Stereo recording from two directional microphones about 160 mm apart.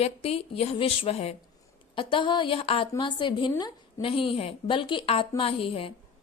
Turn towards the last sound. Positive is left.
turn(degrees=35)  # may be behind; listen again after turning